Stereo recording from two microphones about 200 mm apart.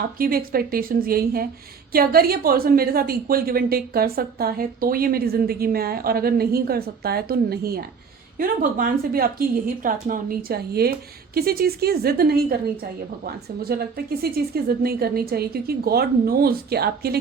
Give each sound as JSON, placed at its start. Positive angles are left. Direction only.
{"t": 0.2, "sound": "a woman's voice", "side_deg": -45}